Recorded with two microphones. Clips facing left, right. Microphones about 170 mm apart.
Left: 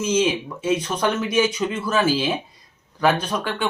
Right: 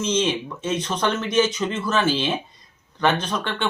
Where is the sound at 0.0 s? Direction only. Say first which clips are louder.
Left 2 dB; 5° left (ahead or behind).